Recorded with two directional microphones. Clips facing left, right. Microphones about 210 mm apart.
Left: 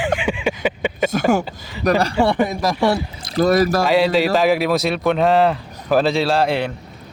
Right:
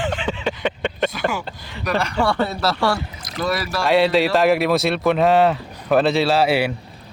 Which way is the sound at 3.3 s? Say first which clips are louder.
Left 8 dB; 40° left (ahead or behind).